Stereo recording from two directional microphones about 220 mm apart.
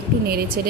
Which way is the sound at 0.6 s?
45° right (ahead or behind).